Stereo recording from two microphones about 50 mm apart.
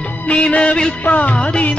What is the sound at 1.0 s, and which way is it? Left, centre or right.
Music, left.